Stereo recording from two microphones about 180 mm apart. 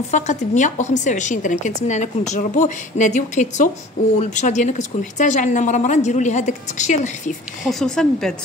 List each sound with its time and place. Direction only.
0.1 s a woman's voice: 40° left (ahead or behind)
7.6 s speech: 5° left (ahead or behind)